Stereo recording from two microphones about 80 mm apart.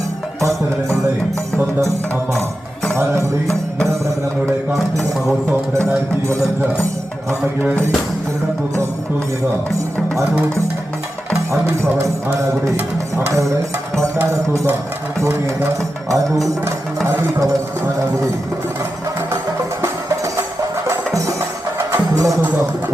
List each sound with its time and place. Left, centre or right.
2.9 s music: right
4.7 s mantra: centre
6.2 s music: right
11.3 s speech: right
12.7 s speech: right
14.2 s music: right
19.8 s music: right